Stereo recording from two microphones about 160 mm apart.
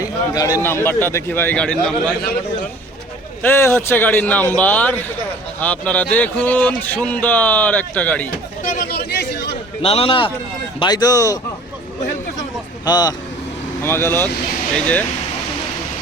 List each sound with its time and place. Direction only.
0.0 s a sound: 20° left (ahead or behind)
0.6 s speech: 15° left (ahead or behind)
3.4 s speech: 15° left (ahead or behind)
8.6 s chatter: 55° left (ahead or behind)
8.9 s a sound: 90° left
9.8 s a man's voice: 35° left (ahead or behind); by 11.3 s 20° left (ahead or behind)
12.8 s speech: 25° left (ahead or behind)
13.8 s speech: 15° left (ahead or behind)